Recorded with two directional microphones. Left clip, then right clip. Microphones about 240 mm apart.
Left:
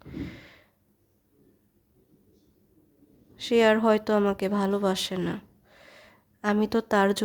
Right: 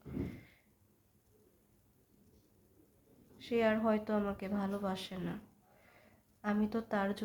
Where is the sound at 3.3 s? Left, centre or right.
Left.